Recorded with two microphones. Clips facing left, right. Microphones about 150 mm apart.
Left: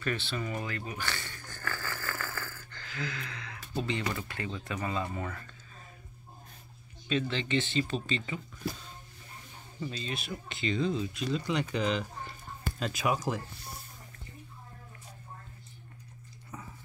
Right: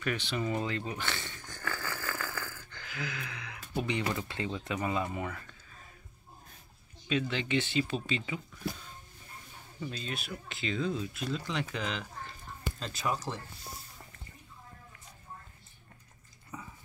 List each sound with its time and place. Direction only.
0.0 s speech: 15° right (ahead or behind)
1.4 s a sound: 20° right (ahead or behind)
7.1 s speech: 10° right (ahead or behind)
9.8 s speech: centre (ahead or behind)
12.7 s speech: 15° left (ahead or behind)